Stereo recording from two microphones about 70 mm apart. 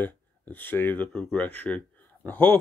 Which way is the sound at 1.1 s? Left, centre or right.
Centre.